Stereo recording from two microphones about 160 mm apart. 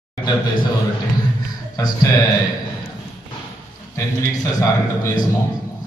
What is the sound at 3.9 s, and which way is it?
Speech, 20° left (ahead or behind).